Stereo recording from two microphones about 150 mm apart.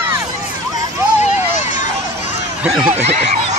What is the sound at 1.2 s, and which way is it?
Hubbub, 50° left (ahead or behind).